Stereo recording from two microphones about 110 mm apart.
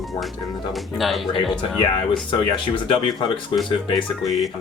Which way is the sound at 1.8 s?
45° left (ahead or behind).